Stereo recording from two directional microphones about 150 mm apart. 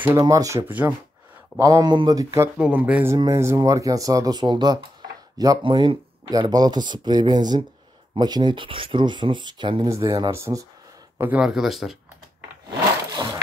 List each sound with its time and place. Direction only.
0.2 s speech: 20° right (ahead or behind)
1.6 s speech: 25° right (ahead or behind)
2.5 s speech: 10° right (ahead or behind); by 9.8 s 30° right (ahead or behind)
9.8 s speech: 20° right (ahead or behind)
11.1 s speech: 10° right (ahead or behind)
13.1 s wood: 25° right (ahead or behind)